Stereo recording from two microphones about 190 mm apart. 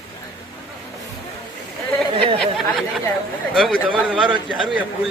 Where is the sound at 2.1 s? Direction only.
30° right (ahead or behind).